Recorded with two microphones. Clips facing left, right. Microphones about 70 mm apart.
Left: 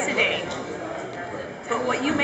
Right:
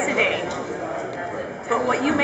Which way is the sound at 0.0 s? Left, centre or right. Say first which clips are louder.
Right 2 dB; centre.